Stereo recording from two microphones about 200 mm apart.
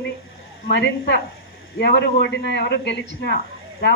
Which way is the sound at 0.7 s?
60° left (ahead or behind).